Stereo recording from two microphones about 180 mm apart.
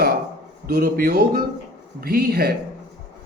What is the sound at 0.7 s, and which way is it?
Speech, 55° right (ahead or behind).